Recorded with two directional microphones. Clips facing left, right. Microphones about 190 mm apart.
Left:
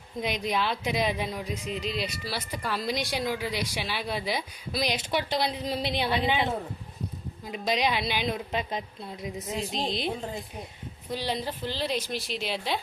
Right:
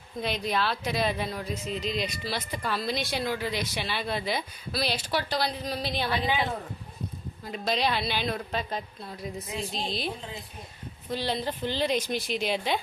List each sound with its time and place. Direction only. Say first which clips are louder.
0.2 s speech: even; 15° left (ahead or behind)
7.4 s a woman's voice: left 1 dB; 15° left (ahead or behind)
11.1 s speech: right 1 dB; 10° left (ahead or behind)